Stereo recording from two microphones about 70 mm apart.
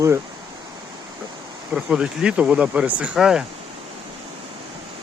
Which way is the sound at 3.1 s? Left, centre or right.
Centre.